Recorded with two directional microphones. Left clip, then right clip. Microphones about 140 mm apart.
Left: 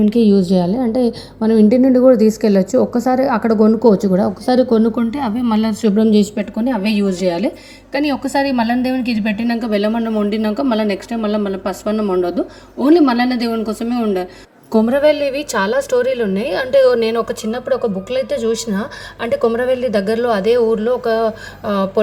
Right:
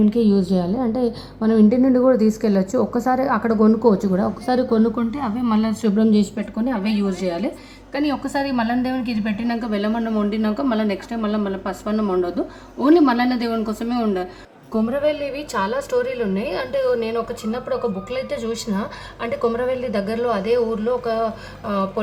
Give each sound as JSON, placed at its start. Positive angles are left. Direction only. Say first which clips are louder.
{"t": 0.0, "sound": "a woman's voice", "louder": "left 5 dB", "side_deg": 25}
{"t": 10.0, "sound": "a man's voice", "louder": "left 4 dB", "side_deg": 15}
{"t": 10.2, "sound": "a woman's voice", "louder": "left 4 dB", "side_deg": 30}
{"t": 11.9, "sound": "a man's voice", "louder": "left 3 dB", "side_deg": 15}
{"t": 14.7, "sound": "a woman's voice", "louder": "left 8 dB", "side_deg": 35}